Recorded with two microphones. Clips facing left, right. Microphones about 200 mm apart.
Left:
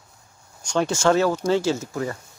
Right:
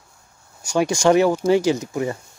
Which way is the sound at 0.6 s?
10° right (ahead or behind).